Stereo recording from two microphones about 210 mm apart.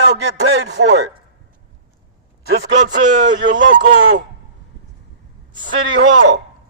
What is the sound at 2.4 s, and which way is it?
Speech, 50° right (ahead or behind).